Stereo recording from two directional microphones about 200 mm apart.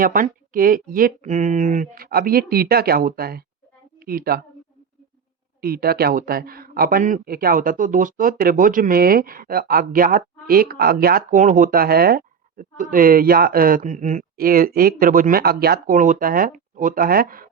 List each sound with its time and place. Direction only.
0.0 s speech: 45° right (ahead or behind)
5.5 s speech: 50° right (ahead or behind)